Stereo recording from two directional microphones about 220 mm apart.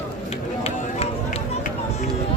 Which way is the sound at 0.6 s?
30° left (ahead or behind).